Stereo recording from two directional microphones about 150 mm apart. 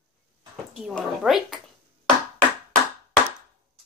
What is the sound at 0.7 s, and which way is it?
Speech, centre (ahead or behind).